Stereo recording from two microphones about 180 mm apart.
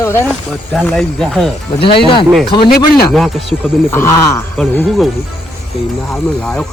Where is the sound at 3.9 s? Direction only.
15° left (ahead or behind).